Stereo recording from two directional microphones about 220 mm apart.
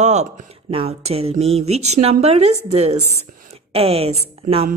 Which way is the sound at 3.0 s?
90° right.